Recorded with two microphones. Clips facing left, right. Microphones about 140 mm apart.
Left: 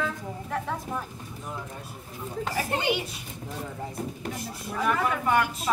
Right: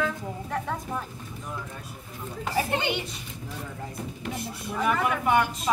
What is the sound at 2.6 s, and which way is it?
Speech, 25° right (ahead or behind).